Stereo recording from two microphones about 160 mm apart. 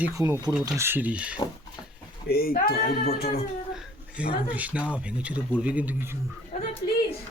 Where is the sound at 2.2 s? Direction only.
70° left (ahead or behind).